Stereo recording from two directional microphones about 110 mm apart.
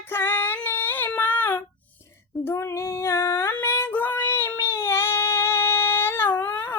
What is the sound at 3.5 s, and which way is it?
Child singing, 20° left (ahead or behind).